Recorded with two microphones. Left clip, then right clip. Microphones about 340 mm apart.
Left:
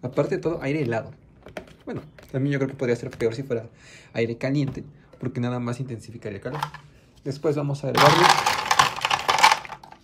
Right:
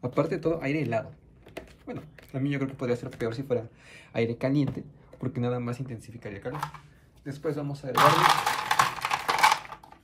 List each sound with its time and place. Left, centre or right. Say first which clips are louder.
0.0 s speech: left 3 dB; centre
7.2 s speech: left 7 dB; centre
7.9 s typewriter: left 4 dB; left